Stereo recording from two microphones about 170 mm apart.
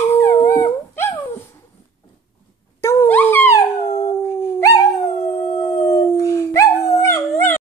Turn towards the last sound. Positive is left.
turn(degrees=15)  # may be behind; listen again after turning